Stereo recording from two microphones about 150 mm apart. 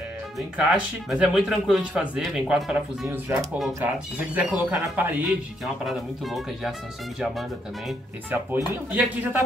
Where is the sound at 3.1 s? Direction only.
15° right (ahead or behind).